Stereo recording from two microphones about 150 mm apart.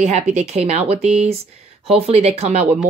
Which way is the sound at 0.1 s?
45° right (ahead or behind).